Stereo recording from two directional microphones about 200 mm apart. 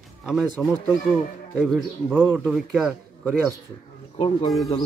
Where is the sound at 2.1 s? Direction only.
10° right (ahead or behind).